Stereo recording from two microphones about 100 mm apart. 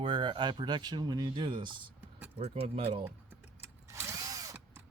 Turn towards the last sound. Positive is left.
turn(degrees=-35)  # may be behind; listen again after turning